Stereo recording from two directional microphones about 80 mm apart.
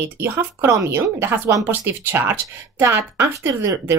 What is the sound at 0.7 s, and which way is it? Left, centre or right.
A woman's voice, right.